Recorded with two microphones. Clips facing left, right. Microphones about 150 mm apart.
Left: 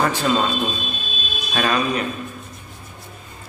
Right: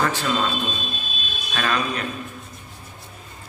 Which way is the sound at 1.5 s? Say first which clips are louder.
Left 4 dB; 15° left (ahead or behind).